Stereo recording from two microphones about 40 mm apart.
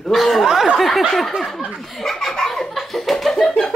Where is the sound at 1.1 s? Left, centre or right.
Centre.